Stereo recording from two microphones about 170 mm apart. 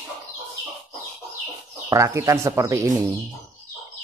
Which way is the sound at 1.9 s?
15° right (ahead or behind).